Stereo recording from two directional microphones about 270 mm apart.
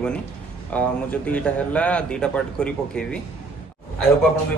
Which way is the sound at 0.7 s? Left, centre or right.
Centre.